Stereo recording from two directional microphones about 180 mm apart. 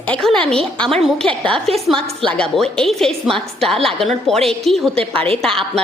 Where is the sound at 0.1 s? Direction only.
5° left (ahead or behind).